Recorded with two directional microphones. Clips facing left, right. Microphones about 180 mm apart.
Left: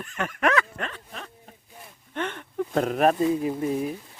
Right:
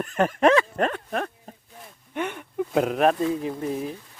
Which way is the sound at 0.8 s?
55° right (ahead or behind).